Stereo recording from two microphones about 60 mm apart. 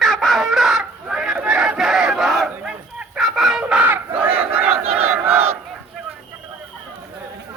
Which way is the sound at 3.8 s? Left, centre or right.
Right.